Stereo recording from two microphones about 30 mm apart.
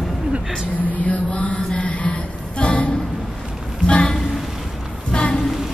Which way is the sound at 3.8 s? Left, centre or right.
Left.